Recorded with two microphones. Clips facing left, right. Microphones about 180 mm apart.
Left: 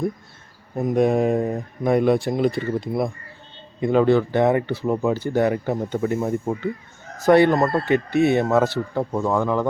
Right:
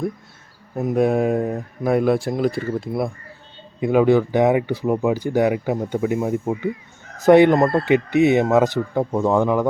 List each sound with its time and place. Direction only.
0.8 s speech: 5° right (ahead or behind)